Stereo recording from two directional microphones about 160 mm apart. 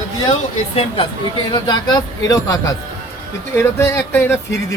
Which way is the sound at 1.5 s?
30° left (ahead or behind).